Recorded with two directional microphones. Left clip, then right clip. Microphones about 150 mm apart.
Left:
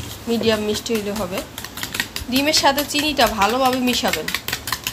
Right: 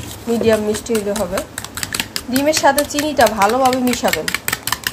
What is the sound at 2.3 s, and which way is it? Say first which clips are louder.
Speech: right 3 dB; 30° right (ahead or behind).